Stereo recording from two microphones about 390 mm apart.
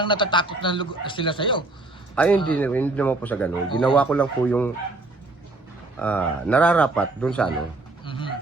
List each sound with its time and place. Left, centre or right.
0.0 s a man's voice: centre
6.0 s a man's voice: centre
8.0 s pigeon: centre